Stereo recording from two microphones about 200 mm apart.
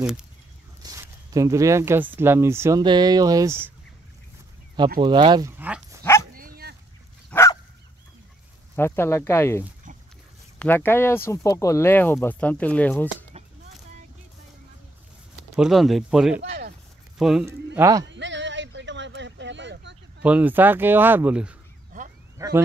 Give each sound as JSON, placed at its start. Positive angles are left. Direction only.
{"t": 0.0, "sound": "speech", "side_deg": -5}
{"t": 0.8, "sound": "speech", "side_deg": -15}
{"t": 5.0, "sound": "speech", "side_deg": -20}
{"t": 5.6, "sound": "dog", "side_deg": -10}
{"t": 6.3, "sound": "dog", "side_deg": -45}
{"t": 7.2, "sound": "dog", "side_deg": 15}
{"t": 8.7, "sound": "speech", "side_deg": 10}
{"t": 15.5, "sound": "speech", "side_deg": 0}
{"t": 16.4, "sound": "a sound", "side_deg": -50}
{"t": 17.2, "sound": "speech", "side_deg": 0}
{"t": 17.7, "sound": "speech", "side_deg": -15}
{"t": 18.0, "sound": "a sound", "side_deg": -65}
{"t": 20.2, "sound": "speech", "side_deg": -5}